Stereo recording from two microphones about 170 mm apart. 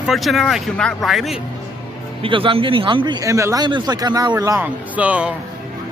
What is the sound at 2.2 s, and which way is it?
Speech, 30° right (ahead or behind).